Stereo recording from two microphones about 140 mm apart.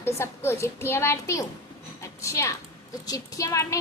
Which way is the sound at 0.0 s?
20° left (ahead or behind).